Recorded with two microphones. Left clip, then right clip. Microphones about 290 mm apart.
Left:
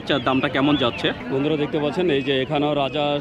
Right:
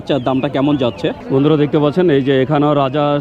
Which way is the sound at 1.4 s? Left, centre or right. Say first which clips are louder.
Right 9 dB; right.